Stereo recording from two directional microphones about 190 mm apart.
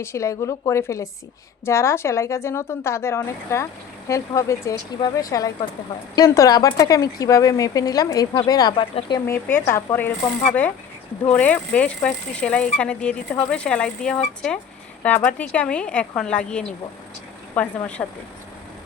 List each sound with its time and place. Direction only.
0.0 s a woman's voice: 15° left (ahead or behind)
11.3 s a woman's voice: 10° left (ahead or behind)